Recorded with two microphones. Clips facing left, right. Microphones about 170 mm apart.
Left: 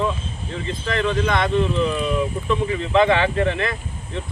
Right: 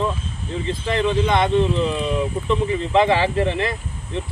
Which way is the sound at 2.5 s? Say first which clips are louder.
Right 1 dB; 20° right (ahead or behind).